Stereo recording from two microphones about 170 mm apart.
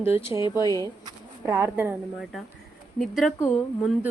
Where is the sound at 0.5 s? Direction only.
20° left (ahead or behind).